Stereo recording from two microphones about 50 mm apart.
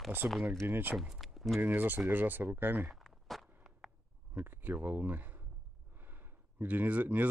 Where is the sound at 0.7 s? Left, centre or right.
Right.